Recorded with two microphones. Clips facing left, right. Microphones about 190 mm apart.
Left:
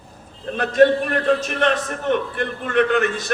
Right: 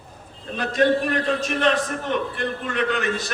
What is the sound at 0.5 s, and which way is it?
A man's voice, 55° left (ahead or behind).